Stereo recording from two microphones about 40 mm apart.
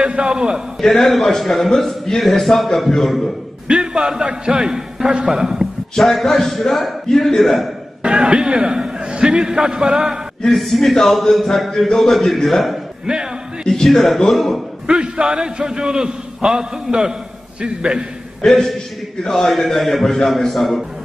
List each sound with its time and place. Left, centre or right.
0.0 s a man's voice: right
0.7 s a man's voice: centre
3.6 s a man's voice: right
5.9 s a man's voice: centre
8.0 s a man's voice: right
10.4 s a man's voice: centre
13.0 s a man's voice: centre
13.8 s a man's voice: centre
14.9 s a man's voice: right
18.4 s a man's voice: centre